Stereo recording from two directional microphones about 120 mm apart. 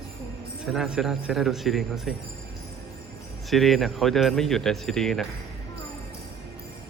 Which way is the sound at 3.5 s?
Centre (ahead or behind).